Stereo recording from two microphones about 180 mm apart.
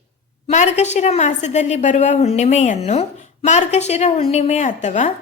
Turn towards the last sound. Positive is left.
turn(degrees=40)  # may be behind; listen again after turning